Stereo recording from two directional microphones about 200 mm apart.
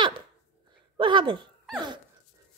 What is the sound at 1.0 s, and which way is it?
Speech, 25° right (ahead or behind).